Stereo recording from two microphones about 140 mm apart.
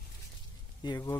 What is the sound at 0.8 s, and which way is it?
Speech, 30° left (ahead or behind).